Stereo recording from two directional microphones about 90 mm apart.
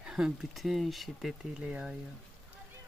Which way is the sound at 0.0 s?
5° right (ahead or behind).